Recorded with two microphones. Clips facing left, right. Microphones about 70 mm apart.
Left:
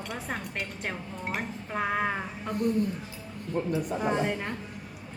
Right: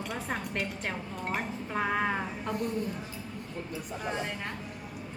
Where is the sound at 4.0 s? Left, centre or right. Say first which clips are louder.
Left 3 dB; centre.